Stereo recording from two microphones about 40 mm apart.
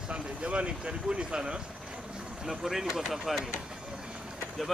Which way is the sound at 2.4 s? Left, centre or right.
Centre.